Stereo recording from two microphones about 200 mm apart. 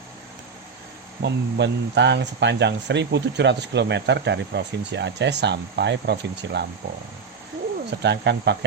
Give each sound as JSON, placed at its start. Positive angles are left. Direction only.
{"t": 1.2, "sound": "speech", "side_deg": -60}
{"t": 7.9, "sound": "speech", "side_deg": -60}